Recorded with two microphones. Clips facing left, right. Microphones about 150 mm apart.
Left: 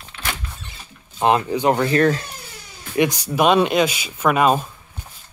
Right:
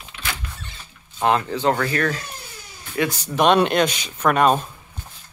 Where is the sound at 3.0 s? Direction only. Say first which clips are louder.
Left 2 dB; 15° left (ahead or behind).